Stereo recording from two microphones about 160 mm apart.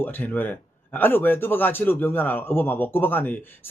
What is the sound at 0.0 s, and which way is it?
Speech, 10° left (ahead or behind).